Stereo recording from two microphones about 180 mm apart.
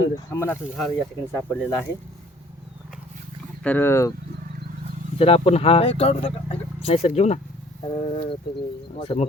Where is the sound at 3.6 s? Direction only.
10° left (ahead or behind).